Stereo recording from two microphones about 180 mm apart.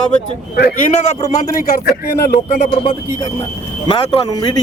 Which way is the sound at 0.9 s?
35° left (ahead or behind).